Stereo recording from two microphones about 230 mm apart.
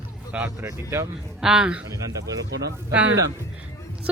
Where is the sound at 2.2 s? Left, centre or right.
Right.